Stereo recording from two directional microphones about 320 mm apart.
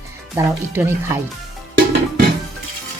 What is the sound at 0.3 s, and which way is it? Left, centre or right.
Speech, centre.